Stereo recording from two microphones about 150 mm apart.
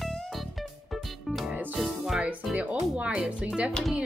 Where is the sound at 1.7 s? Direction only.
Centre (ahead or behind).